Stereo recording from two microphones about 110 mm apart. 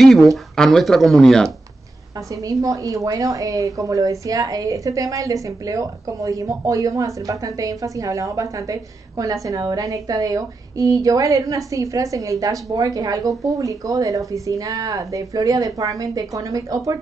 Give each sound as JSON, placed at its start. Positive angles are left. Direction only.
{"t": 0.0, "sound": "speech", "side_deg": 0}
{"t": 2.4, "sound": "a woman's voice", "side_deg": -30}